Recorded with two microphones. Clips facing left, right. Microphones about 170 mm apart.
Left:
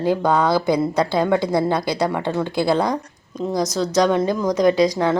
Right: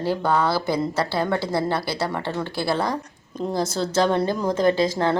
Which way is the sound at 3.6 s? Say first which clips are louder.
Left 3 dB; 30° right (ahead or behind).